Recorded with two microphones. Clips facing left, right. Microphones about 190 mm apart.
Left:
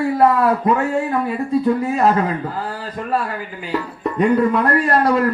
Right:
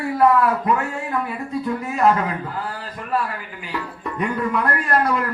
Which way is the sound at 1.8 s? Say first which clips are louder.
Left 2 dB; 35° left (ahead or behind).